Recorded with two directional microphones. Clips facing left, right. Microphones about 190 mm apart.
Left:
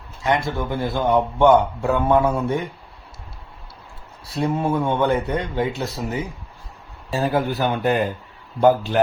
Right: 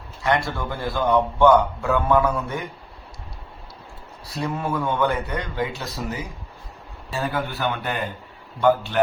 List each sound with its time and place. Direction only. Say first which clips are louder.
0.2 s a man's voice: left 1 dB; 20° left (ahead or behind)
4.4 s a man's voice: left 5 dB; 30° left (ahead or behind)
7.2 s speech: left 5 dB; 40° left (ahead or behind)